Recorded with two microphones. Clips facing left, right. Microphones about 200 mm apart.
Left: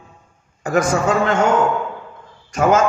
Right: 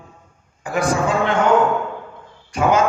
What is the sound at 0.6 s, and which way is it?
Speech, 45° left (ahead or behind).